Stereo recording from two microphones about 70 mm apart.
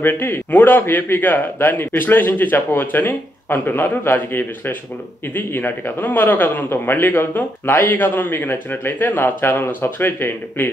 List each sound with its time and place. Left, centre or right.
0.0 s a man's voice: left